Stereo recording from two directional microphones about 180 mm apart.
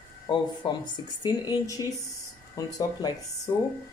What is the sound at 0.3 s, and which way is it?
Speech, 25° left (ahead or behind).